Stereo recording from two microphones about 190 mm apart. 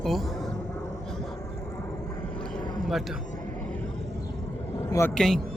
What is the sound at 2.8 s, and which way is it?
Speech, centre (ahead or behind).